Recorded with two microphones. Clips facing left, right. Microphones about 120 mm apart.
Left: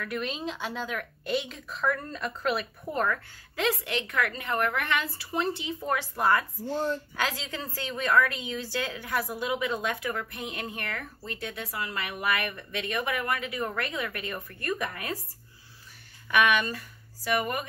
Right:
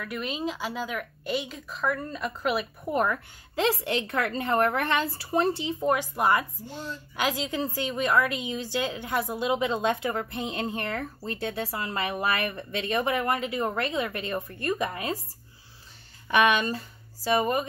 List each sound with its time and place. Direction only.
0.0 s speech: 5° right (ahead or behind)
3.5 s a woman's voice: 30° right (ahead or behind)
5.9 s a woman's voice: 15° right (ahead or behind)
16.3 s speech: 25° right (ahead or behind)